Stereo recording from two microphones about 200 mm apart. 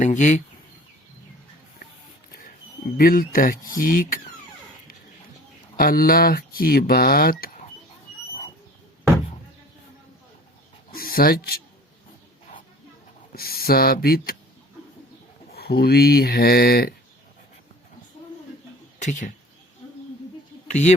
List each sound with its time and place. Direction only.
0.0 s speech: 35° left (ahead or behind)
2.3 s a sound: 45° left (ahead or behind)
3.7 s speech: 45° left (ahead or behind)
5.7 s speech: 45° left (ahead or behind)
10.9 s speech: 45° left (ahead or behind)
13.3 s speech: 50° left (ahead or behind)
15.5 s speech: 50° left (ahead or behind)
18.9 s speech: 35° left (ahead or behind)
20.7 s speech: 35° left (ahead or behind)